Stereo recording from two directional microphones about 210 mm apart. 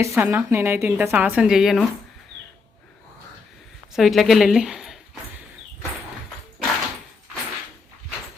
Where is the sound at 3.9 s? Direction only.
Centre (ahead or behind).